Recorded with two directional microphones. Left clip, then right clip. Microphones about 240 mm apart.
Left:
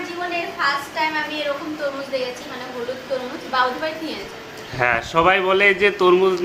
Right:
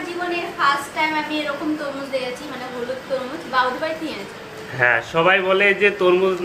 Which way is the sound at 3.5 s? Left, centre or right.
Centre.